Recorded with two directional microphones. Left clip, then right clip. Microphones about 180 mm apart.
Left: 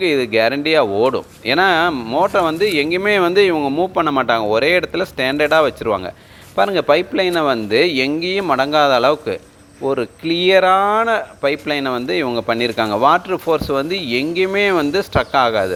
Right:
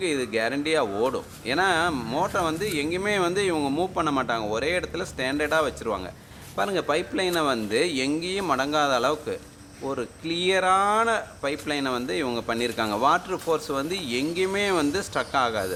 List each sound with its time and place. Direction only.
0.0 s speech: 35° left (ahead or behind)
2.0 s speech: 20° left (ahead or behind)
2.2 s speech: 35° left (ahead or behind)